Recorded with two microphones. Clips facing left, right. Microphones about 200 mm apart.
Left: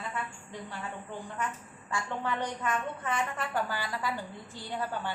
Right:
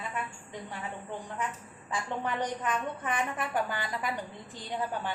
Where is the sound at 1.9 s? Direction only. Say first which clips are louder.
Even; 15° right (ahead or behind).